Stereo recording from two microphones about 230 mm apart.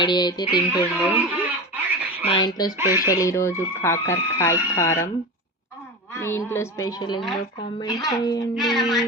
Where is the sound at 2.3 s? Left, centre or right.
Centre.